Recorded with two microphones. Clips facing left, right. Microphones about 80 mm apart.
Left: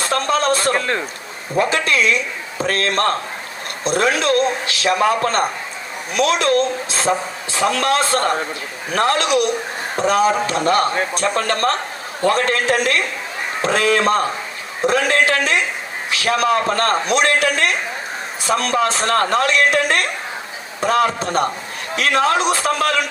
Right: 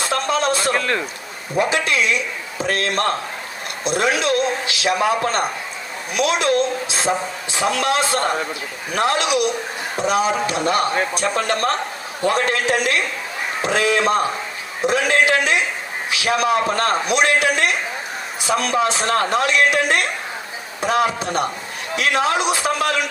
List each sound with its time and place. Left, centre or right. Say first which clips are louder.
0.0 s a sound: left 2 dB; left
0.7 s speech: left 1 dB; left
1.5 s a man's voice: left 1 dB; left